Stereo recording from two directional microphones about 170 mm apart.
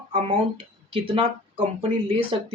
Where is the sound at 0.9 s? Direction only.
30° right (ahead or behind).